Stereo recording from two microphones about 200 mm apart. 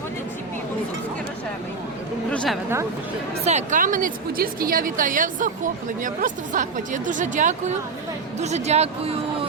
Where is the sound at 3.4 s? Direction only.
35° right (ahead or behind).